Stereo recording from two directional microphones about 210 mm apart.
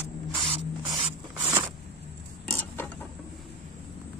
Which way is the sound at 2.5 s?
10° left (ahead or behind).